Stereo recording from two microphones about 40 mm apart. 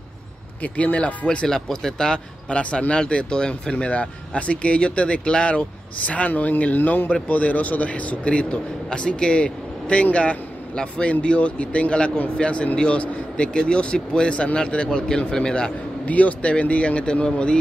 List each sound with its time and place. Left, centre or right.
0.6 s a man's voice: left
1.5 s speech: centre
2.5 s speech: left
6.3 s speech: left
7.2 s a man's voice: left; by 15.7 s centre
16.1 s a man's voice: left